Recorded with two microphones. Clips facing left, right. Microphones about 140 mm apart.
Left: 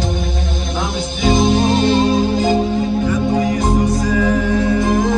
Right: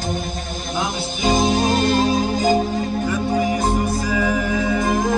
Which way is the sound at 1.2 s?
45° right (ahead or behind).